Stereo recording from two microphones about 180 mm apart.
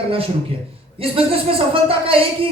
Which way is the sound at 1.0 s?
30° right (ahead or behind).